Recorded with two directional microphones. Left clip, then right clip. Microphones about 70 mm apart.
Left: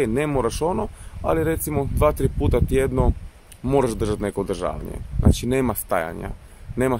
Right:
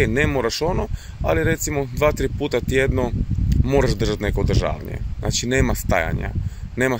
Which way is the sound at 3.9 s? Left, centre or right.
Left.